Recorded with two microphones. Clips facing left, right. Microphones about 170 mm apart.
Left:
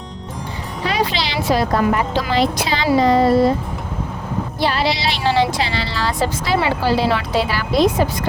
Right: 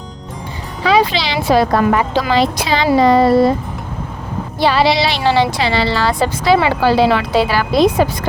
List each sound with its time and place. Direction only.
0.9 s speech: 65° right (ahead or behind)
4.6 s speech: 85° right